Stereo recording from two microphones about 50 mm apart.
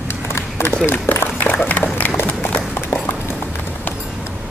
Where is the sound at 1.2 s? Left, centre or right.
Left.